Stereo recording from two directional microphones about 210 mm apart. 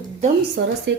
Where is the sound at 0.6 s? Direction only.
50° right (ahead or behind).